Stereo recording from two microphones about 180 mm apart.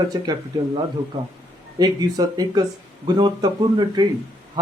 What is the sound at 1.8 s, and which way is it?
A man's voice, 20° right (ahead or behind).